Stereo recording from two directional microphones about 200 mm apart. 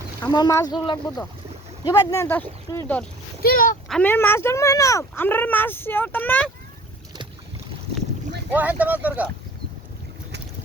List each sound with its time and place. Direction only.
0.2 s speech: 20° left (ahead or behind)
3.4 s speech: 45° left (ahead or behind)
3.8 s speech: 5° left (ahead or behind)
8.5 s speech: 10° right (ahead or behind)